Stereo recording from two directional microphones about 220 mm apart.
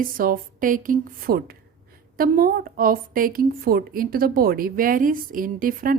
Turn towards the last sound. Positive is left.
turn(degrees=-40)  # may be behind; listen again after turning